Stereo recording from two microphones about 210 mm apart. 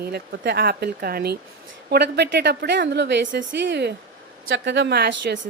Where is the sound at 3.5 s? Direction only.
60° right (ahead or behind).